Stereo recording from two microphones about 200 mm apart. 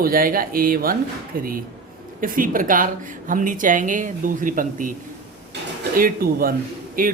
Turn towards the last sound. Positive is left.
turn(degrees=-45)  # may be behind; listen again after turning